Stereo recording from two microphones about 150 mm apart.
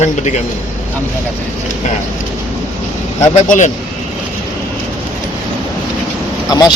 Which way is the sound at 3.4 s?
55° left (ahead or behind).